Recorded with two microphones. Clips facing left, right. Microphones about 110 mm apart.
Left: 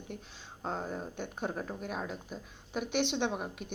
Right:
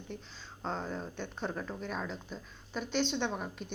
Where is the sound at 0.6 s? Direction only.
10° left (ahead or behind).